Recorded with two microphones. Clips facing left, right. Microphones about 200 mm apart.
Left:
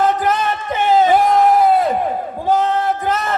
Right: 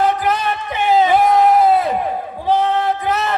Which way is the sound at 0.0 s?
50° left (ahead or behind).